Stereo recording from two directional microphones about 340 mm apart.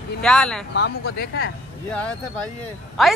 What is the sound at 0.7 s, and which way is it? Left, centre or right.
Speech, left.